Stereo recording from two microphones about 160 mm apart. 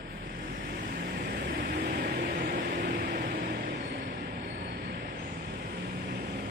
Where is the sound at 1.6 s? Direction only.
70° right (ahead or behind).